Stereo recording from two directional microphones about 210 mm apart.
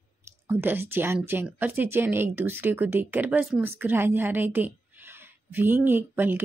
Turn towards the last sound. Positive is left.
turn(degrees=-10)  # may be behind; listen again after turning